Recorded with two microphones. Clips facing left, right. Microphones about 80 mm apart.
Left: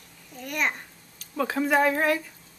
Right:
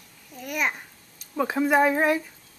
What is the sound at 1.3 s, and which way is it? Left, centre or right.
Speech, centre.